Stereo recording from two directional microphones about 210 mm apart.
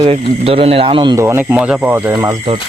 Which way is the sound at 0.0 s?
30° right (ahead or behind).